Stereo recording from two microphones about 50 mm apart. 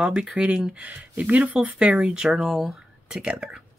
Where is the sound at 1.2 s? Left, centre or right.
Right.